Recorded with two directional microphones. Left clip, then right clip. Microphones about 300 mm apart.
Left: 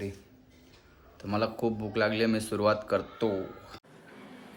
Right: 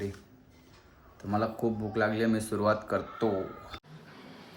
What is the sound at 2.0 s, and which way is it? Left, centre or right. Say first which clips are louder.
Speech: left 1 dB; centre.